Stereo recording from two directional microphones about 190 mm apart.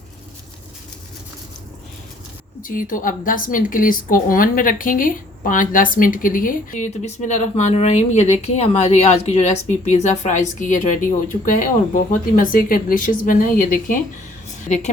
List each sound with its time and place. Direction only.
2.6 s a woman's voice: 45° left (ahead or behind)